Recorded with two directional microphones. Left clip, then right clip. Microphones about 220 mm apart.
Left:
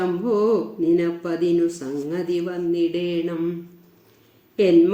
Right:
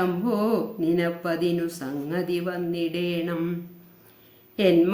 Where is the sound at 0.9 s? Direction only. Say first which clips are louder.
Left 3 dB; 10° right (ahead or behind).